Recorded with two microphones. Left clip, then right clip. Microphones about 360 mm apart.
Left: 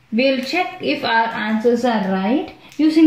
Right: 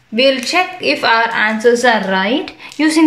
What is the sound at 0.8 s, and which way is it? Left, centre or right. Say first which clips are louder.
Speech: right 5 dB; centre.